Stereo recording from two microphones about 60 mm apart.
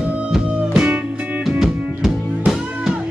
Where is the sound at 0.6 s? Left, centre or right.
Centre.